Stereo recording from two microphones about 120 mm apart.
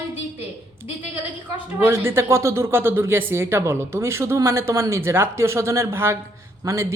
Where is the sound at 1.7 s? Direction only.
20° right (ahead or behind).